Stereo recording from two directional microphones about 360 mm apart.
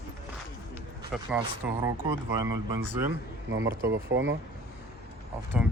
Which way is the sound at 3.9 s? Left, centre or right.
Right.